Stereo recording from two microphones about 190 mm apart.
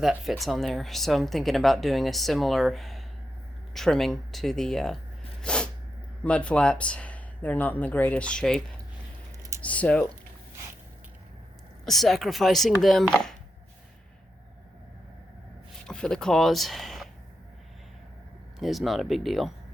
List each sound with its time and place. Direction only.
0.0 s speech: centre (ahead or behind)
5.4 s sneeze: 5° left (ahead or behind)
6.2 s speech: 5° left (ahead or behind)
11.9 s speech: centre (ahead or behind)
15.9 s speech: 5° left (ahead or behind)
18.6 s speech: centre (ahead or behind)